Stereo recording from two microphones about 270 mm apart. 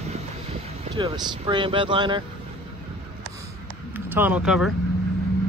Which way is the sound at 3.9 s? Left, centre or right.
Centre.